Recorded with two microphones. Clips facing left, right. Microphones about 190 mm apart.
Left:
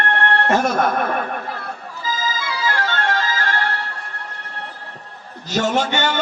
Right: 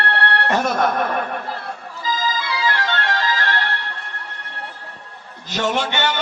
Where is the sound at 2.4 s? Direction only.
45° left (ahead or behind).